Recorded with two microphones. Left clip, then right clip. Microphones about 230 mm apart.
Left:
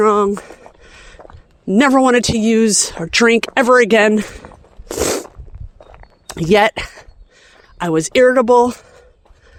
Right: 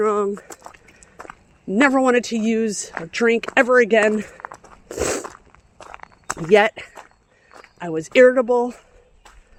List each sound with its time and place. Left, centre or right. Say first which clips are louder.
0.0 s speech: left 7 dB; left
1.6 s speech: left 4 dB; left
4.9 s a sound: left 5 dB; left
5.8 s walk: right 2 dB; right
6.4 s speech: left 3 dB; left